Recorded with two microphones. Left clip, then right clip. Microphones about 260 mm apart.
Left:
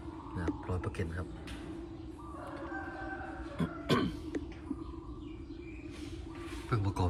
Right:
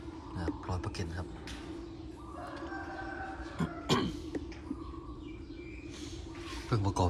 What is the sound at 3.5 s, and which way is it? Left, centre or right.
Cough, centre.